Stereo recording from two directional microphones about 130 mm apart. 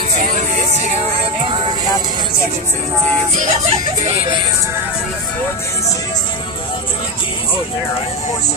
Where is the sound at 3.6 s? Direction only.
55° right (ahead or behind).